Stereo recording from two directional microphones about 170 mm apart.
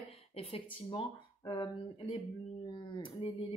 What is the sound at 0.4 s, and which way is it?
Speech, 30° left (ahead or behind).